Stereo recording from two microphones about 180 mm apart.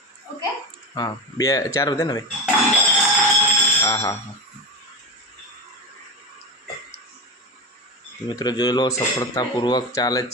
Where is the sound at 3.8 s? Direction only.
15° left (ahead or behind).